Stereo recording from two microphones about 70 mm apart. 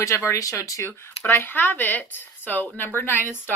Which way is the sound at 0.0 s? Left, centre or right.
Left.